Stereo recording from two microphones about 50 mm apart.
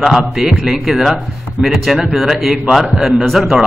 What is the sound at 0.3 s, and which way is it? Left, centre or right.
Speech, centre.